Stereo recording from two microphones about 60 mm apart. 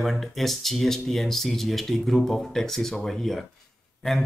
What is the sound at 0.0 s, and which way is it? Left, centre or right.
Speech, centre.